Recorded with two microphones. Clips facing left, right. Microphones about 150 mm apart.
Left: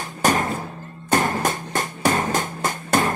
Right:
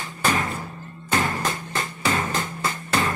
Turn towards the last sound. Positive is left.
turn(degrees=45)  # may be behind; listen again after turning